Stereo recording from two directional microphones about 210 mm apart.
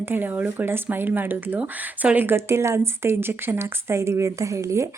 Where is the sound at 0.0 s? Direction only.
10° right (ahead or behind).